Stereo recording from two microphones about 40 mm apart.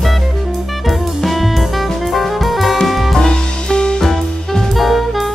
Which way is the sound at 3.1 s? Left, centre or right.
Centre.